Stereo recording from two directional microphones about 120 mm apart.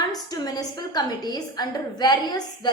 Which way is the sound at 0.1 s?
35° left (ahead or behind).